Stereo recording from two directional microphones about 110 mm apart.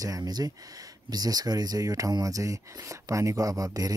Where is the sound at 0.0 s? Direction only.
35° right (ahead or behind).